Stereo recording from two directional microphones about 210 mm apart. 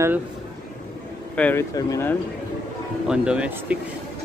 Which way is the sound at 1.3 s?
10° left (ahead or behind).